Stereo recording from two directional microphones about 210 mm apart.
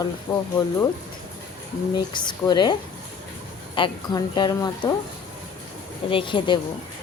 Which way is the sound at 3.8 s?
20° left (ahead or behind).